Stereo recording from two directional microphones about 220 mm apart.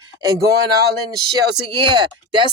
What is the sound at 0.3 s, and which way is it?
Speech, 15° right (ahead or behind).